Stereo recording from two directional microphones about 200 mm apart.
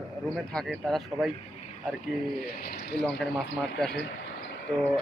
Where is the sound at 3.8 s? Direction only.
Centre (ahead or behind).